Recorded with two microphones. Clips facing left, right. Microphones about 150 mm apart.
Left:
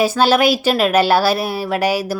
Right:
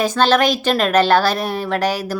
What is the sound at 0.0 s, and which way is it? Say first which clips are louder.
Speech: left 1 dB; 10° left (ahead or behind).